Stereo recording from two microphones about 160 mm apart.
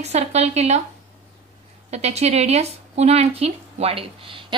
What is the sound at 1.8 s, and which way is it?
A woman's voice, 45° right (ahead or behind).